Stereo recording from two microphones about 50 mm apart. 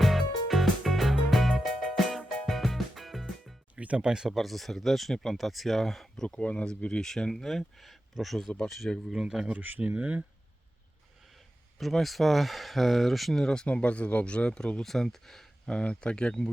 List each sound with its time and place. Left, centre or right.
0.0 s music: centre
3.8 s a sound: right
4.0 s speech: centre
4.3 s speech: centre
6.2 s speech: left; by 8.4 s centre
8.4 s speech: centre
9.2 s speech: centre
9.5 s speech: right
11.8 s speech: centre
13.4 s speech: centre
13.7 s speech: left